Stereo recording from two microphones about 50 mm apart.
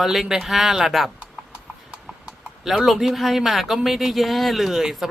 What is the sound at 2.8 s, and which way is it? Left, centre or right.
Speech, centre.